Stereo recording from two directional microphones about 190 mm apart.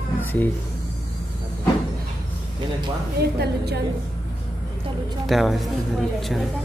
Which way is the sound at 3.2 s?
60° right (ahead or behind).